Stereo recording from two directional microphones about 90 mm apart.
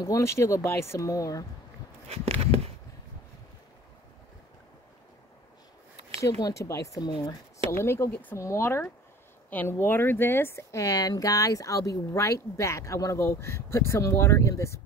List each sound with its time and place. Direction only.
0.0 s speech: 35° left (ahead or behind)
2.3 s a sound: 90° right
6.2 s speech: 35° left (ahead or behind)
7.7 s speech: 30° left (ahead or behind)